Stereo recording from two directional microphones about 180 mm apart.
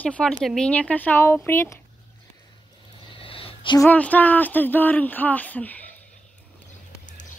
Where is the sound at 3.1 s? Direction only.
30° left (ahead or behind).